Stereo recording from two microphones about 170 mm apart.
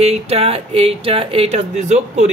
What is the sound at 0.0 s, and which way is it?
Speech, 35° right (ahead or behind).